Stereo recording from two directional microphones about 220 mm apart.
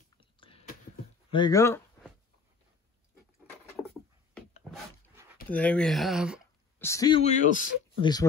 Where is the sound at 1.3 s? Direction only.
15° left (ahead or behind).